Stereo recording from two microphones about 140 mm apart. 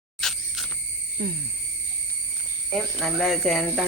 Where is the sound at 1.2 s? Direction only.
90° right.